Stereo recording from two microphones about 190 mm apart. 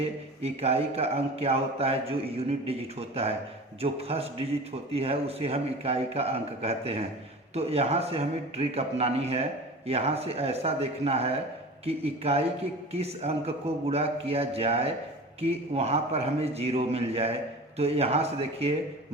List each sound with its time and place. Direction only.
0.0 s a man's voice: 30° right (ahead or behind)